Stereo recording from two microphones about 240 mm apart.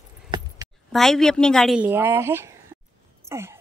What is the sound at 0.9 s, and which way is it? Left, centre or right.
Speech, centre.